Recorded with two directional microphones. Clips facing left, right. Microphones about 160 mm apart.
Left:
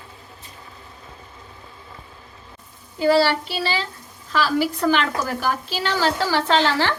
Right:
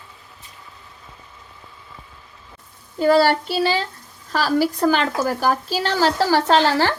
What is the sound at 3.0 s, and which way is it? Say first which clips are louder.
Speech: right 2 dB; 45° right (ahead or behind).